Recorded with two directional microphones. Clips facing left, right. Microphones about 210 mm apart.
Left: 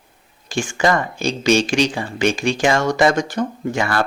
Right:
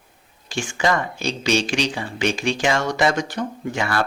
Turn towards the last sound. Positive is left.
turn(degrees=45)  # may be behind; listen again after turning